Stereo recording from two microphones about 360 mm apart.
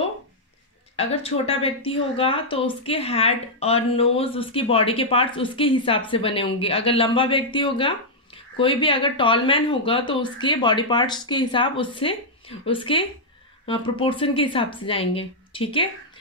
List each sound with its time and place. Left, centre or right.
0.9 s a woman's voice: centre